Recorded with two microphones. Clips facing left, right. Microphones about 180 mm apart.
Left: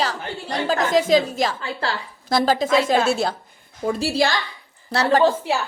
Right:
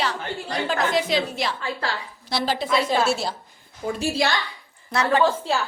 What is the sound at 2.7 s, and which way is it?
Speech, 90° left.